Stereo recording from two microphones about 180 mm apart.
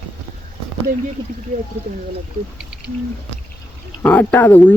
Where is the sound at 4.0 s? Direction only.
10° left (ahead or behind).